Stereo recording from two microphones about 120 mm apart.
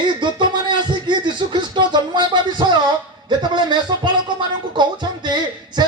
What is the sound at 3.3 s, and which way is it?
Speech, 40° right (ahead or behind).